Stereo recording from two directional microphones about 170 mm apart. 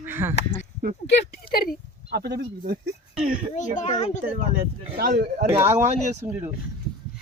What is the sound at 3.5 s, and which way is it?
Speech, 45° left (ahead or behind).